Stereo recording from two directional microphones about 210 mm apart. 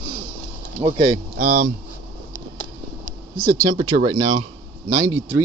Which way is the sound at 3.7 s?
25° right (ahead or behind).